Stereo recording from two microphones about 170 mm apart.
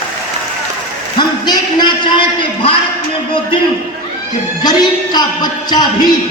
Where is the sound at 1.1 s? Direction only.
25° left (ahead or behind).